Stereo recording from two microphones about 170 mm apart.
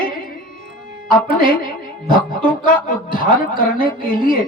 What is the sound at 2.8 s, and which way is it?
A woman's voice, 55° left (ahead or behind).